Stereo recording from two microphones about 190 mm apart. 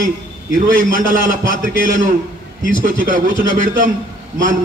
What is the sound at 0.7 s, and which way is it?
A man's voice, 45° right (ahead or behind).